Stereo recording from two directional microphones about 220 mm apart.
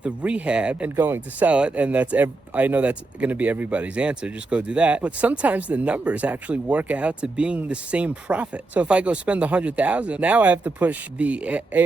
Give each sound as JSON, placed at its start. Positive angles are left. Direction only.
{"t": 0.0, "sound": "speech", "side_deg": -5}